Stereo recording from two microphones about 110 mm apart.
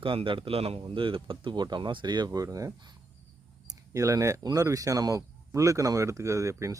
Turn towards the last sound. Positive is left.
turn(degrees=-25)  # may be behind; listen again after turning